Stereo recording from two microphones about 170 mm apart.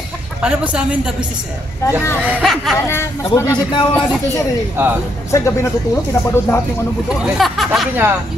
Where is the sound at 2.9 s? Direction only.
15° left (ahead or behind).